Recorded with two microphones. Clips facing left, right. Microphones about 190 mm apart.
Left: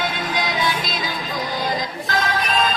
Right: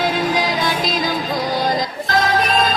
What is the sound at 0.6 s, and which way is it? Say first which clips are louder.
Music: right 5 dB; 45° right (ahead or behind).